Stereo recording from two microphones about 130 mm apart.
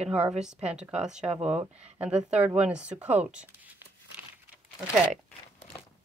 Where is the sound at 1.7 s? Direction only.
55° right (ahead or behind).